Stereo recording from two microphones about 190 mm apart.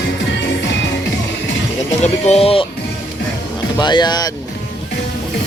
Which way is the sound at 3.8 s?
25° left (ahead or behind).